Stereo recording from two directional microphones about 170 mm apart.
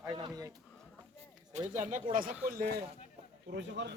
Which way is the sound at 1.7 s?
45° right (ahead or behind).